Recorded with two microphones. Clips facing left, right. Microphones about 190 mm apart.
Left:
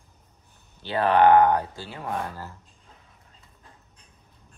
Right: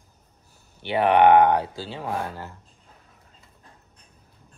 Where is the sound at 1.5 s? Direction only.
85° right.